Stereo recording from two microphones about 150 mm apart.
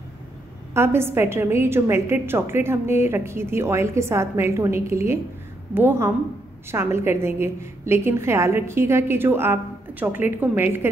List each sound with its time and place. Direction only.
0.7 s a woman's voice: 15° right (ahead or behind)